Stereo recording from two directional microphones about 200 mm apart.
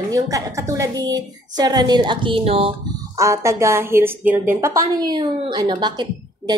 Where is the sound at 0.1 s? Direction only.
15° right (ahead or behind).